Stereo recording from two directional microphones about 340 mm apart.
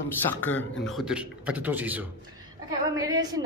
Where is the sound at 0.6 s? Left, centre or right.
Left.